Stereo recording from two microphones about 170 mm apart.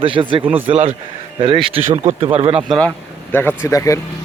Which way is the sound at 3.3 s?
15° left (ahead or behind).